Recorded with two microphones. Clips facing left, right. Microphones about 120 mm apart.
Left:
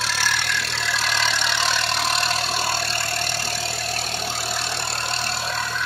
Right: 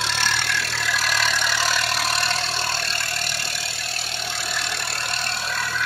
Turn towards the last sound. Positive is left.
turn(degrees=30)  # may be behind; listen again after turning